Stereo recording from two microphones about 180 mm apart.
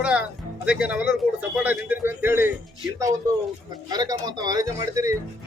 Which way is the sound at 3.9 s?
20° right (ahead or behind).